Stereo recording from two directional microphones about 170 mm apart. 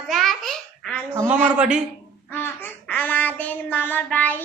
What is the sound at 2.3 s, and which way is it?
Child singing, 10° left (ahead or behind).